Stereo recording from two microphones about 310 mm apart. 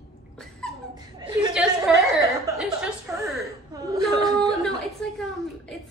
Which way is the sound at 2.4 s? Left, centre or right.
Centre.